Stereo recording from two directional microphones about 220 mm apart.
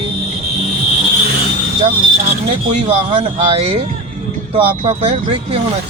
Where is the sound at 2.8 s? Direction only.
25° right (ahead or behind).